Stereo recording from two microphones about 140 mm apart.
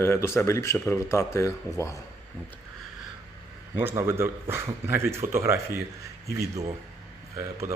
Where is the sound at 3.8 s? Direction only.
15° right (ahead or behind).